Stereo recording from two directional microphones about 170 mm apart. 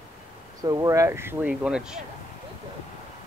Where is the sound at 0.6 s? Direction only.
20° right (ahead or behind); by 2.0 s 5° right (ahead or behind).